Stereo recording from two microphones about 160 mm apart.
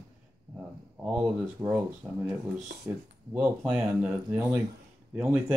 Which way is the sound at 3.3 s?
10° right (ahead or behind).